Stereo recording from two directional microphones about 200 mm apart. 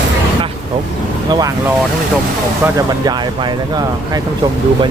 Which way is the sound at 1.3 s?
20° right (ahead or behind).